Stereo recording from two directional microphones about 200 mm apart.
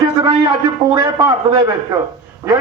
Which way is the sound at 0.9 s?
20° right (ahead or behind).